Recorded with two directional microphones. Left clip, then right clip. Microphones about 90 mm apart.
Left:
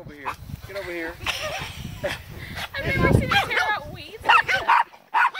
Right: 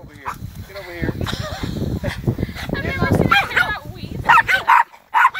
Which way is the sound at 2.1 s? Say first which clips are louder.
Right 5 dB; 60° left (ahead or behind).